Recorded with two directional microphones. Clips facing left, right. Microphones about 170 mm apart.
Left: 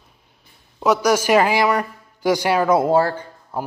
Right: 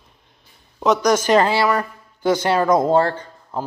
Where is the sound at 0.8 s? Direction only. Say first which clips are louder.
Even; 10° left (ahead or behind).